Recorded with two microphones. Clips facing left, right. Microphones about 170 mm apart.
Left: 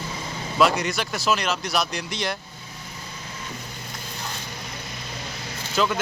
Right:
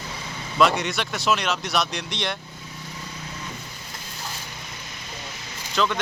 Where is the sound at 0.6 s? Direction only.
Centre (ahead or behind).